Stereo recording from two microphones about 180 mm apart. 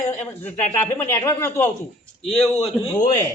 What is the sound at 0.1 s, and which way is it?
Speech, 10° left (ahead or behind).